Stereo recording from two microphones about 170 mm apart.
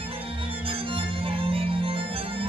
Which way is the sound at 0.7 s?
30° right (ahead or behind).